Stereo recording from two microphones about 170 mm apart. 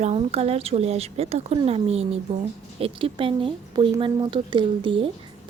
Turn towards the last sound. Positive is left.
turn(degrees=-30)  # may be behind; listen again after turning